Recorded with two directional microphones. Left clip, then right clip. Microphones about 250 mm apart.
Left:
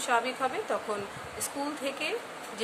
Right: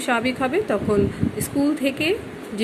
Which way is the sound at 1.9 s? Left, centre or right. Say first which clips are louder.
Right 10 dB; centre.